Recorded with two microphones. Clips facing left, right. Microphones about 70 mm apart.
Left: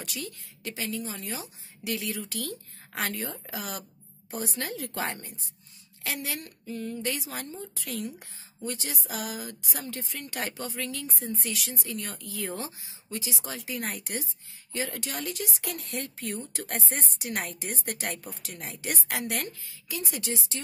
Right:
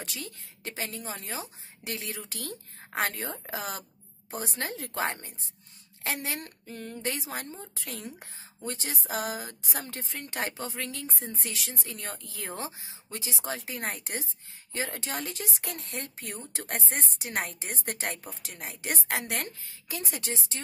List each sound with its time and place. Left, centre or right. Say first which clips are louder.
0.0 s a woman's voice: left 2 dB; right
19.6 s a woman's voice: left 1 dB; right